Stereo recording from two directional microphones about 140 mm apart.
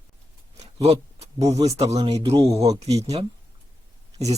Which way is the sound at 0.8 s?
50° right (ahead or behind).